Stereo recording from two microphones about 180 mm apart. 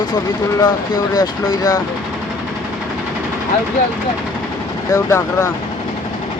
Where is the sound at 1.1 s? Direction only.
20° left (ahead or behind).